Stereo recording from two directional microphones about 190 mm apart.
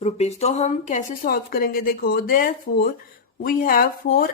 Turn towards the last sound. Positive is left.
turn(degrees=50)  # may be behind; listen again after turning